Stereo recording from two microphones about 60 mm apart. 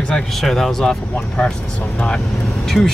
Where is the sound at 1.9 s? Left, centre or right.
Centre.